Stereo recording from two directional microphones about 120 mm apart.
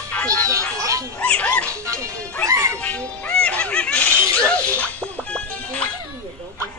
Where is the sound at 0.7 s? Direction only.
25° right (ahead or behind).